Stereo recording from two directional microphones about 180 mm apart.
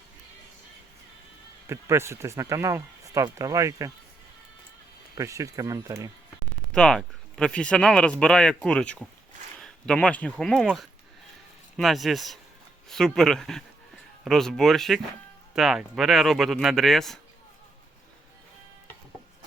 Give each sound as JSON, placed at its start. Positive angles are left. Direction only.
{"t": 1.6, "sound": "speech", "side_deg": -15}
{"t": 5.1, "sound": "speech", "side_deg": -15}
{"t": 6.7, "sound": "speech", "side_deg": 5}